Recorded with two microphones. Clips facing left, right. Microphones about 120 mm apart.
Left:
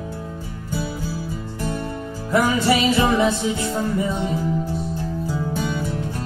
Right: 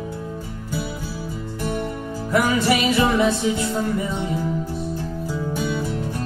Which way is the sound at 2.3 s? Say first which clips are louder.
Left 1 dB; 20° left (ahead or behind).